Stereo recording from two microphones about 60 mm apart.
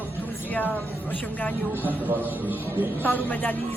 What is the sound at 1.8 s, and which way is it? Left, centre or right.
A man's voice, right.